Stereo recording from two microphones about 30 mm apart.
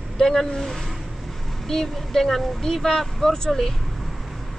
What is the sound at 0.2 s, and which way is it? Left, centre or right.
Speech, centre.